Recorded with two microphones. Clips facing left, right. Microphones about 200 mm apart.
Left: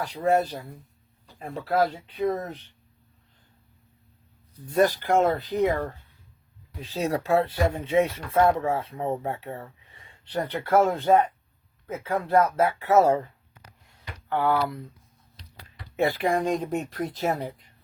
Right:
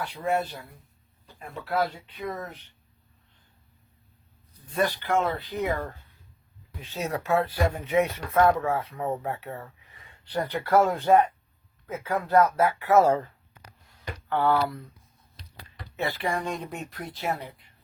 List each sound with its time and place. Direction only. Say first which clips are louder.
0.0 s speech: left 4 dB; 40° left (ahead or behind)
4.7 s speech: left 4 dB; 45° left (ahead or behind)
6.8 s speech: left 3 dB; 35° left (ahead or behind)
14.3 s speech: even; 15° left (ahead or behind)
16.0 s speech: left 5 dB; 50° left (ahead or behind)